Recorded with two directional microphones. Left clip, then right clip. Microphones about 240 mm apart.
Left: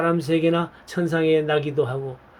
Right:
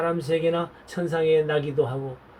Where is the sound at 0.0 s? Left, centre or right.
Left.